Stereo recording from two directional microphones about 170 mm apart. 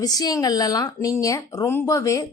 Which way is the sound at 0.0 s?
20° left (ahead or behind).